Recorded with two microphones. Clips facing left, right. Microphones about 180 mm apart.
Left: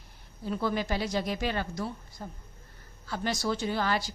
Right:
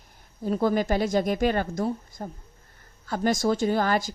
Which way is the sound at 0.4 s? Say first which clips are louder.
Right 7 dB; 45° right (ahead or behind).